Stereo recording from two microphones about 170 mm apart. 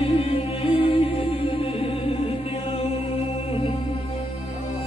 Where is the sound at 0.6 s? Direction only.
35° left (ahead or behind).